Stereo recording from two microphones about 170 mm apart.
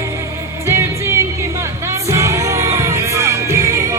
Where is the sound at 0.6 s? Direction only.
15° right (ahead or behind).